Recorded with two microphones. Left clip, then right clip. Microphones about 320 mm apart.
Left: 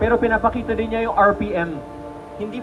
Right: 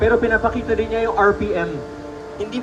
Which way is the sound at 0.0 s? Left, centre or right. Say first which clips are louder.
Right 1 dB; left.